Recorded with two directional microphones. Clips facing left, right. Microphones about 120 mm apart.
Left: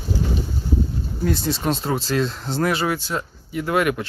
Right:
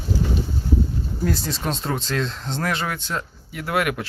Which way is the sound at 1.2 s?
Centre (ahead or behind).